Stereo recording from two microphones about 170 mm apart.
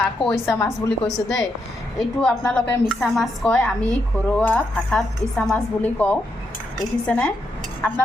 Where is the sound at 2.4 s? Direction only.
5° left (ahead or behind).